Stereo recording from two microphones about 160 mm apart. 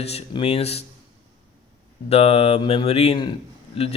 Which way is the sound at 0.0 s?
40° left (ahead or behind).